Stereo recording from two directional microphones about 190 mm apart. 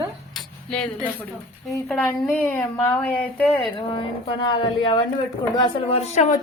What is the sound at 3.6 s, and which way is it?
A woman's voice, 25° left (ahead or behind).